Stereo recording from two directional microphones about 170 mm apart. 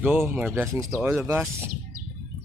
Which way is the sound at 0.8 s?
Centre (ahead or behind).